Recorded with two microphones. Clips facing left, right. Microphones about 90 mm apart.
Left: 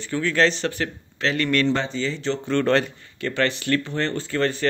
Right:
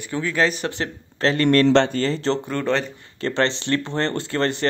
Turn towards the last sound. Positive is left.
turn(degrees=-35)  # may be behind; listen again after turning